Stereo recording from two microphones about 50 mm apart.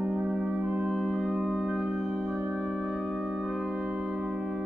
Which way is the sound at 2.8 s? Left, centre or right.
Right.